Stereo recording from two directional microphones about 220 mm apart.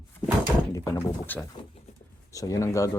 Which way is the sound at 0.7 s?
15° left (ahead or behind).